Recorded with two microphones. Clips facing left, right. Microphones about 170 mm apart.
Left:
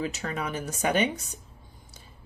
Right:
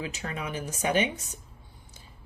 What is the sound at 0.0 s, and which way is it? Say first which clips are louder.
Speech: left 3 dB; 40° left (ahead or behind).